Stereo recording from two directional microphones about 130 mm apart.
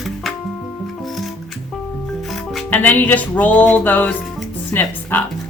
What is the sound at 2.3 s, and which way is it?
Music, centre (ahead or behind).